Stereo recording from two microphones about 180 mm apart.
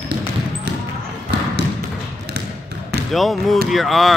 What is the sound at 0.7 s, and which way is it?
Basketball bounce, 70° right (ahead or behind).